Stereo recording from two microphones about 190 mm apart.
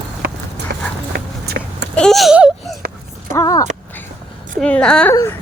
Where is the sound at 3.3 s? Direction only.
15° left (ahead or behind).